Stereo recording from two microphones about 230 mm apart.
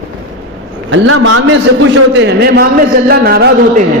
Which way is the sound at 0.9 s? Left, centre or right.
Right.